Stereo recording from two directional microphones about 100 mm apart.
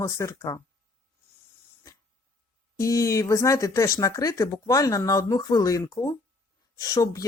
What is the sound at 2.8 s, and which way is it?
Speech, 35° left (ahead or behind).